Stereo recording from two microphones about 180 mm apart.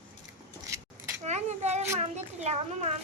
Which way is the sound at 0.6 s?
15° right (ahead or behind).